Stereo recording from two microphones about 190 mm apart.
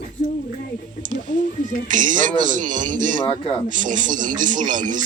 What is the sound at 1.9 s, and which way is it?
Speech, 45° right (ahead or behind).